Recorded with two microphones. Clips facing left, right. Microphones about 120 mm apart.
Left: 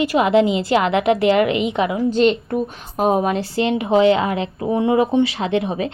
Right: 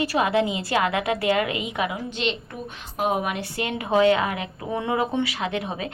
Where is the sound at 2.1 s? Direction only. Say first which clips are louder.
Left 12 dB; 45° left (ahead or behind); by 5.9 s 30° left (ahead or behind).